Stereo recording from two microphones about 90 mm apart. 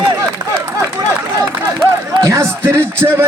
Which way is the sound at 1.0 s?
45° right (ahead or behind).